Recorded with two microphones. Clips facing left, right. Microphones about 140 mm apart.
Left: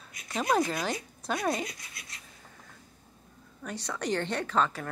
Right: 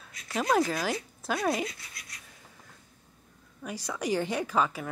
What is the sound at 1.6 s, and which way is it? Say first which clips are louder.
Speech: right 3 dB; 20° left (ahead or behind).